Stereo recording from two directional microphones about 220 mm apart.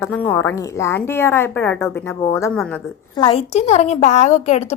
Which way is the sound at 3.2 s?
25° left (ahead or behind).